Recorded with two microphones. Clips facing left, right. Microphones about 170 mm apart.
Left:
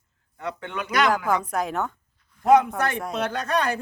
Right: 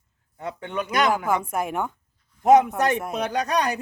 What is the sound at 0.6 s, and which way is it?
A man's voice, 20° right (ahead or behind).